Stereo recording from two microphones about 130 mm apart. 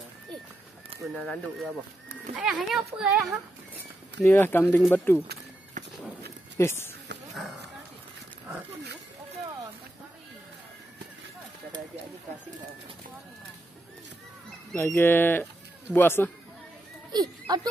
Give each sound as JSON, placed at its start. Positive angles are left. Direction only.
{"t": 1.1, "sound": "speech", "side_deg": 5}
{"t": 4.2, "sound": "speech", "side_deg": 15}
{"t": 5.8, "sound": "walk", "side_deg": -75}
{"t": 6.6, "sound": "speech", "side_deg": 20}
{"t": 7.3, "sound": "a sound", "side_deg": 0}
{"t": 14.8, "sound": "speech", "side_deg": 15}
{"t": 17.1, "sound": "a sound", "side_deg": -30}